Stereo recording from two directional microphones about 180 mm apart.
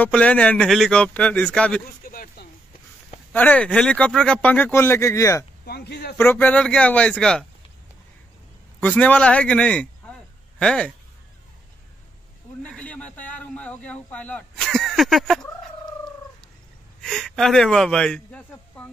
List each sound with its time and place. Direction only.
0.0 s speech: 10° left (ahead or behind)
2.0 s chop: 55° left (ahead or behind)
3.3 s speech: 10° left (ahead or behind)
5.7 s speech: 65° left (ahead or behind)
6.1 s speech: 10° left (ahead or behind)
8.8 s a man's voice: 10° left (ahead or behind)
12.6 s a sound: 5° left (ahead or behind)
17.0 s a sound: 5° left (ahead or behind)